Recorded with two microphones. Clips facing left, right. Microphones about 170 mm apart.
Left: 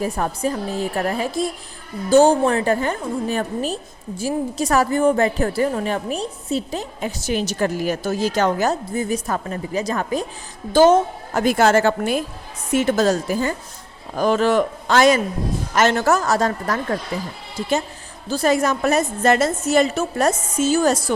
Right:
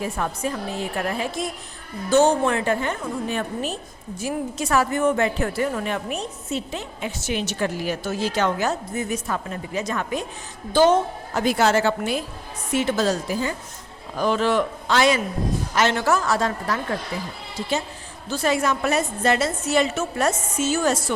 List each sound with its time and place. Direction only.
0.0 s a woman's voice: 40° left (ahead or behind)
18.3 s a woman's voice: 40° left (ahead or behind)